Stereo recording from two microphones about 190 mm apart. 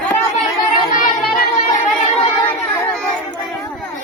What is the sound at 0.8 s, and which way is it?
Singing, 45° left (ahead or behind).